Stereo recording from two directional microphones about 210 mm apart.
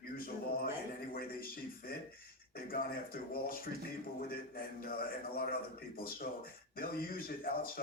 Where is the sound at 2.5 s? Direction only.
45° left (ahead or behind).